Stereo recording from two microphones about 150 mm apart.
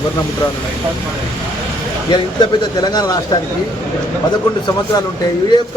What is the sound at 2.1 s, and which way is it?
Speech, 25° left (ahead or behind).